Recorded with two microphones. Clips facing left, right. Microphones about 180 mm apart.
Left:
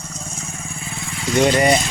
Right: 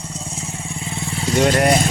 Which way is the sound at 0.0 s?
30° right (ahead or behind).